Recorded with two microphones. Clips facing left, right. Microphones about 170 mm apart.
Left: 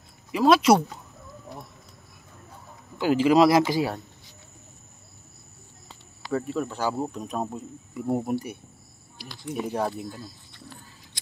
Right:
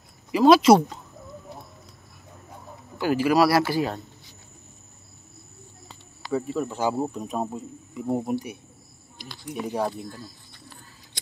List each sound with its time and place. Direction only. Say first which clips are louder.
0.3 s speech: right 3 dB; centre (ahead or behind)
3.0 s speech: left 2 dB; 15° left (ahead or behind)
6.3 s speech: right 1 dB; 5° right (ahead or behind)